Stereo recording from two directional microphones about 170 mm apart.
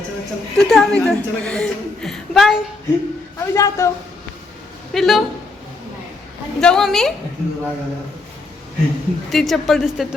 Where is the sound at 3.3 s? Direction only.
15° left (ahead or behind).